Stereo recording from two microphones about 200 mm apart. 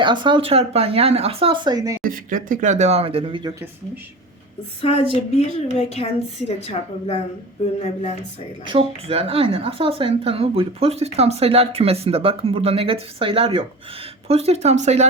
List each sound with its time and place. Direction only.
0.0 s a woman's voice: 25° right (ahead or behind)
2.0 s speech: 45° right (ahead or behind); by 3.5 s 25° right (ahead or behind)
4.8 s a woman's voice: 30° left (ahead or behind)
8.6 s a woman's voice: 25° right (ahead or behind)